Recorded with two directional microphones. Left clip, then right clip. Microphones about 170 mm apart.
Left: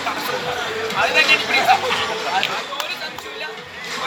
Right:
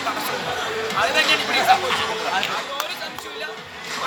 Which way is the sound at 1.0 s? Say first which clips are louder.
Left 4 dB; 20° right (ahead or behind).